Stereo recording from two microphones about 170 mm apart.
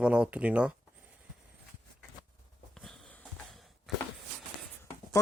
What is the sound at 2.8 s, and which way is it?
Sniff, 5° left (ahead or behind).